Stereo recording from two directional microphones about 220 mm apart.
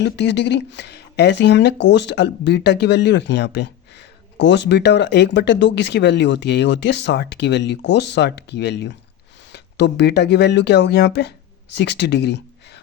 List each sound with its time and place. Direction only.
0.0 s speech: 50° left (ahead or behind)